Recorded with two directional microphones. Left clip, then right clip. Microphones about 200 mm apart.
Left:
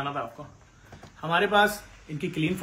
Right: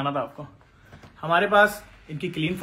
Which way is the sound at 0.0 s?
55° right (ahead or behind).